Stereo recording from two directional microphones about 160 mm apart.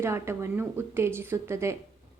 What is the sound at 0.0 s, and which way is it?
A woman's voice, 15° right (ahead or behind).